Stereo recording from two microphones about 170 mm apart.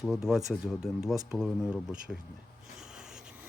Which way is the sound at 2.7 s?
5° right (ahead or behind).